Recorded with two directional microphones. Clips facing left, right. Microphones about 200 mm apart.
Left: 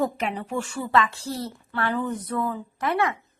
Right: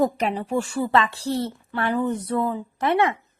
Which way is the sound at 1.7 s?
15° right (ahead or behind).